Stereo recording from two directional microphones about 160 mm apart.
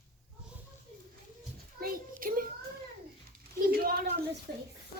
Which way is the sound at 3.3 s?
70° right (ahead or behind).